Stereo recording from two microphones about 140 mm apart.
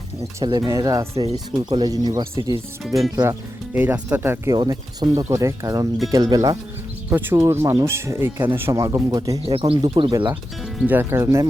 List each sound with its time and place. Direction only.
0.4 s speech: 35° right (ahead or behind)
2.8 s speech: centre (ahead or behind)
3.8 s speech: 10° right (ahead or behind)
4.5 s speech: 30° right (ahead or behind)
7.1 s speech: 15° right (ahead or behind)
9.5 s speech: 45° right (ahead or behind)
9.8 s speech: 30° right (ahead or behind)
10.6 s music: 5° right (ahead or behind)
10.9 s speech: 20° right (ahead or behind)